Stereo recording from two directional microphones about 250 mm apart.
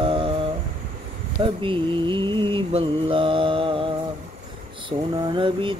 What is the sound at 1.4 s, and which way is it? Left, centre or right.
Mantra, centre.